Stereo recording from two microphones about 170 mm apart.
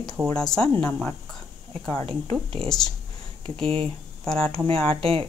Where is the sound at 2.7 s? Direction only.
Centre (ahead or behind).